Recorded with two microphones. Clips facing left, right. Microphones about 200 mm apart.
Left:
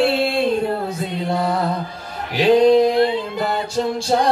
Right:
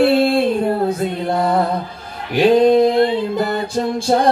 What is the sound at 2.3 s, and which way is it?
Male singing, 55° right (ahead or behind).